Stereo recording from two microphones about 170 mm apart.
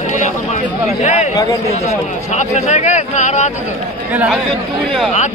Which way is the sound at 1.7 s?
40° left (ahead or behind).